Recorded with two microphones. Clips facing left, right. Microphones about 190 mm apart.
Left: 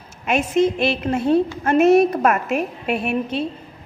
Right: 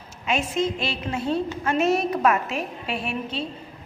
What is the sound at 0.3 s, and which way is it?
A woman's voice, 65° left (ahead or behind).